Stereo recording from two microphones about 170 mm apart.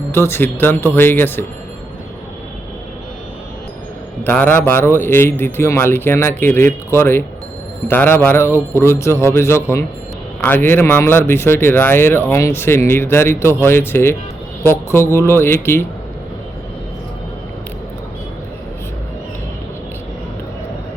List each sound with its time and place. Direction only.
0.1 s speech: 15° left (ahead or behind)
4.2 s speech: 10° left (ahead or behind)